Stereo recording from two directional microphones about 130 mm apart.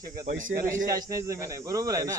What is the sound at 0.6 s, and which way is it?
Speech, 20° right (ahead or behind).